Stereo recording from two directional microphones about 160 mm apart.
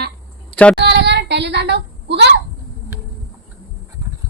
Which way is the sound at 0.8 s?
90° right.